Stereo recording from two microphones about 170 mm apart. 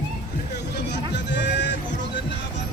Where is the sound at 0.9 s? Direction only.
90° left.